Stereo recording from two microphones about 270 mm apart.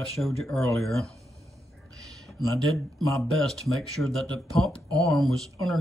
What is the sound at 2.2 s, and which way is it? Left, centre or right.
Speech, centre.